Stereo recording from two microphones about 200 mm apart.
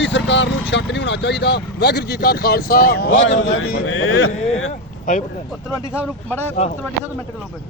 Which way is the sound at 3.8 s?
90° left.